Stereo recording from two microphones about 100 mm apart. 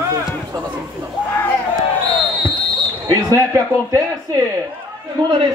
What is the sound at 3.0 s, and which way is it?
Speech, 35° right (ahead or behind).